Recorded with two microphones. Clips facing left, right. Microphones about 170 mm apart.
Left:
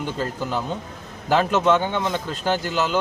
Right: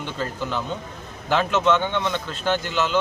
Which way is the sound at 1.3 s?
40° left (ahead or behind).